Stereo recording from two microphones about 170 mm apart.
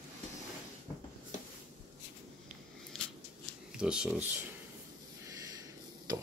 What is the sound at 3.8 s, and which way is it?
Speech, 5° right (ahead or behind).